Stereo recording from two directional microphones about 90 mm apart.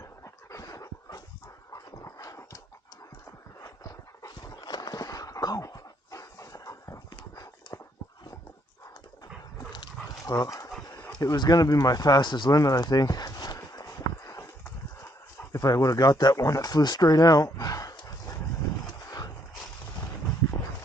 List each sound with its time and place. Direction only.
0.5 s dog: 40° left (ahead or behind)
3.6 s horse: 40° left (ahead or behind)
7.1 s a sound: 55° left (ahead or behind)
7.7 s dog: 40° left (ahead or behind)
9.7 s dog: 50° left (ahead or behind)
11.3 s speech: 45° left (ahead or behind)
12.5 s a sound: 40° left (ahead or behind)
15.5 s speech: 40° left (ahead or behind)
18.0 s dog: 45° left (ahead or behind)